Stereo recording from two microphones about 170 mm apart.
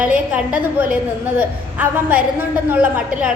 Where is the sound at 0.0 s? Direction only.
10° right (ahead or behind).